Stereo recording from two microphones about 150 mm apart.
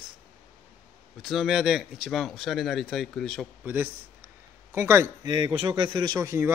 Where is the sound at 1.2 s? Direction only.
Centre (ahead or behind).